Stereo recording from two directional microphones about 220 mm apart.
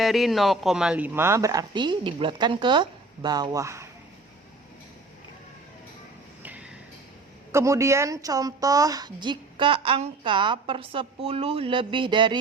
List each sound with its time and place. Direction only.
0.0 s a man's voice: centre (ahead or behind)
6.4 s a sound: 5° right (ahead or behind)
7.5 s a woman's voice: 15° right (ahead or behind)